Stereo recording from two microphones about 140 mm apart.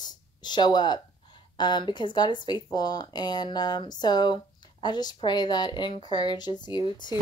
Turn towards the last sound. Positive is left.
turn(degrees=30)  # may be behind; listen again after turning